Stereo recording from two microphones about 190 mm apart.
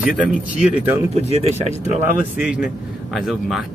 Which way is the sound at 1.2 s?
35° left (ahead or behind).